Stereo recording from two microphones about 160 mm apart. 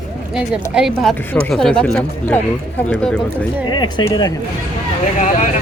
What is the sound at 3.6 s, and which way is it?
Speech, 30° left (ahead or behind).